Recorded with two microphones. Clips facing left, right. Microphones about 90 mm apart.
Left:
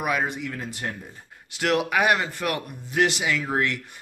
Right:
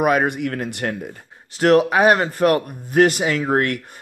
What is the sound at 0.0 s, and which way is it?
Speech, 55° right (ahead or behind).